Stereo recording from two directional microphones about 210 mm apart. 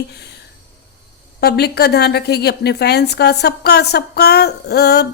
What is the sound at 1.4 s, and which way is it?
A woman's voice, 50° left (ahead or behind).